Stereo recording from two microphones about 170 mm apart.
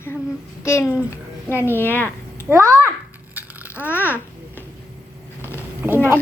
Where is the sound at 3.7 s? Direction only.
15° left (ahead or behind).